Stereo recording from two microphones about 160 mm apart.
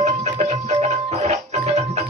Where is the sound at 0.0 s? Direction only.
45° right (ahead or behind).